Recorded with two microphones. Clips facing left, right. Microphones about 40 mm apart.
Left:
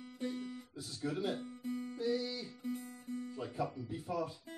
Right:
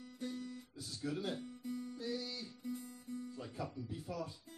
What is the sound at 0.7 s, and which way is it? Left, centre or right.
Speech, centre.